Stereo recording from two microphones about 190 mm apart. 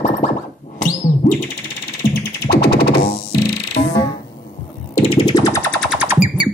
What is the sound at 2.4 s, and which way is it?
Music, 55° left (ahead or behind).